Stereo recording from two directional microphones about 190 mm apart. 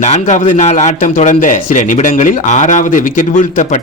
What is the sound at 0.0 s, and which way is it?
Speech, 40° left (ahead or behind).